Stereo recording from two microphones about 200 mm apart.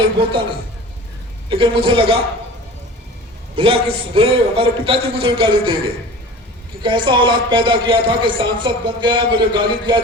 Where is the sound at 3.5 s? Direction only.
30° right (ahead or behind).